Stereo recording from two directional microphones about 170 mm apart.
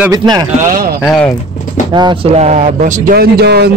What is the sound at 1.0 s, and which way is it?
Speech, 5° left (ahead or behind).